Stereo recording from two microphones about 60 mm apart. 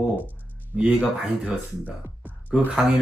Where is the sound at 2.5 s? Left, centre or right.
Centre.